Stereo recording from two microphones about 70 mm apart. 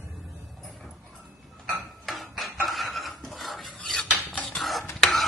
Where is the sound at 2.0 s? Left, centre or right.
Centre.